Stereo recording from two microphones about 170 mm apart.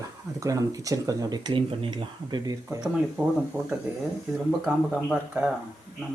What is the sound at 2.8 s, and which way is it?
Speech, 5° right (ahead or behind).